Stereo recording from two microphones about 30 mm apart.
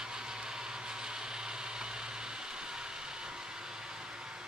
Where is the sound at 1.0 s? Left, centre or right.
Right.